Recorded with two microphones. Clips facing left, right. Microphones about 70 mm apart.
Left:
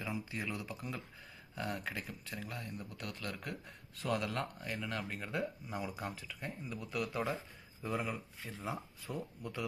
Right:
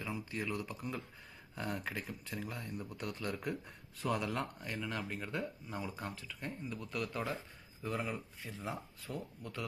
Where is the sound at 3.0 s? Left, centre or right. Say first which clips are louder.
Right 4 dB; centre.